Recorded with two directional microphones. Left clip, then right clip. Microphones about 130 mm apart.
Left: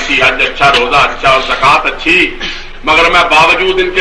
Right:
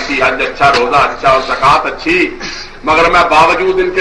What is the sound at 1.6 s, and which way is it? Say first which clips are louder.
A man's voice: left 2 dB; 35° right (ahead or behind).